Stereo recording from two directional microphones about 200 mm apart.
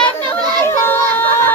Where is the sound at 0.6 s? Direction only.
15° left (ahead or behind).